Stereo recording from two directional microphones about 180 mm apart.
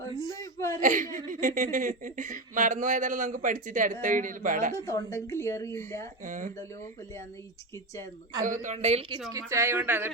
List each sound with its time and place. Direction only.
0.1 s speech: 20° right (ahead or behind)
0.3 s whimper: 15° left (ahead or behind)
0.8 s speech: 45° right (ahead or behind)
4.9 s a woman's voice: 15° left (ahead or behind)
6.2 s speech: 45° right (ahead or behind)
8.6 s a woman's voice: 40° right (ahead or behind)
9.3 s speech: 15° right (ahead or behind)